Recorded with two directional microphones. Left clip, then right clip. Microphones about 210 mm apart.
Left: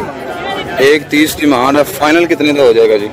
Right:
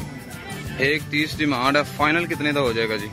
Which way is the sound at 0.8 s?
10° left (ahead or behind).